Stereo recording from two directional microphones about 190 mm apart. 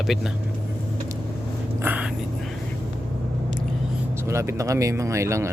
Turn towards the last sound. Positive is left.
turn(degrees=-15)  # may be behind; listen again after turning